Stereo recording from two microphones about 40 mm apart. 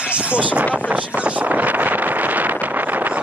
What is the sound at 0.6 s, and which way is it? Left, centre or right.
Speech, right.